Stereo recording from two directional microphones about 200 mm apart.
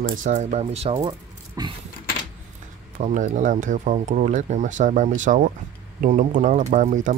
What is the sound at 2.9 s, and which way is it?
Speech, 40° right (ahead or behind).